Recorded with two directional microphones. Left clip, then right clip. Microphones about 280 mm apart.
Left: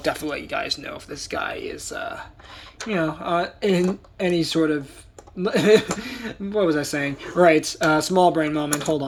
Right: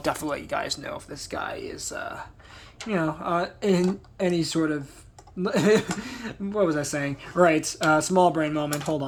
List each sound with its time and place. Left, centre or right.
0.0 s speech: right